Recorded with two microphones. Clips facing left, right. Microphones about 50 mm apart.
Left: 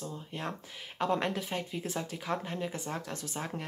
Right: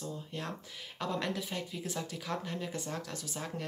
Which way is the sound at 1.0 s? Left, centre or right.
Left.